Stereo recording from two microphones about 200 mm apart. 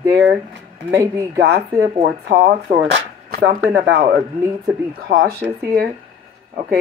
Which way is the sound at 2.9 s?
50° right (ahead or behind).